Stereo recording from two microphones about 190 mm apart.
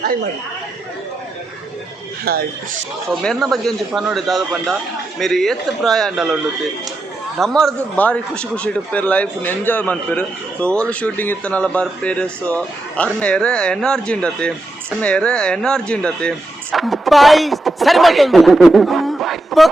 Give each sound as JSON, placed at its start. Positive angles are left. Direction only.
{"t": 2.3, "sound": "speech", "side_deg": -55}
{"t": 3.2, "sound": "a man's voice", "side_deg": 0}
{"t": 7.3, "sound": "a man's voice", "side_deg": 0}